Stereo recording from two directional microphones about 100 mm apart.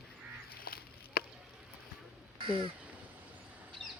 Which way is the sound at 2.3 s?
60° right (ahead or behind).